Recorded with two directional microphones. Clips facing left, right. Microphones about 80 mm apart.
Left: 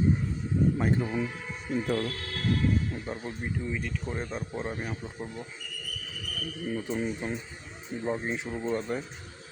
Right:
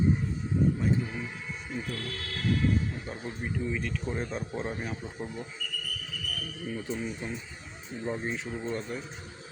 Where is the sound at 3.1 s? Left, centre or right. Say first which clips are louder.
Left 3 dB; left.